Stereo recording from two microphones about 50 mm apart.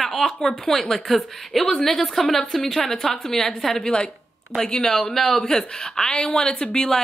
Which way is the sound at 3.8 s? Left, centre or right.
Centre.